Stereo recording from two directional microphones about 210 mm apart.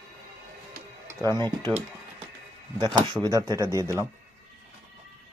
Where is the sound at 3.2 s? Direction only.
15° right (ahead or behind).